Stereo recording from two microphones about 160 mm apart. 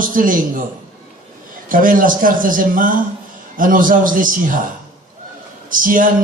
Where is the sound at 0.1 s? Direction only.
60° right (ahead or behind).